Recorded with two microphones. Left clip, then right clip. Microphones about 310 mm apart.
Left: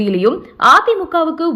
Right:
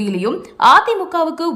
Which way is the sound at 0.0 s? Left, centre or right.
Centre.